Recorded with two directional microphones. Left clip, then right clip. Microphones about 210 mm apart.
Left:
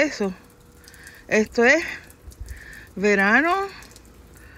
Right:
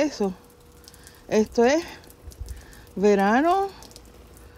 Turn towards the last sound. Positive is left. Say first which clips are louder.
# even
turn(degrees=-15)  # may be behind; listen again after turning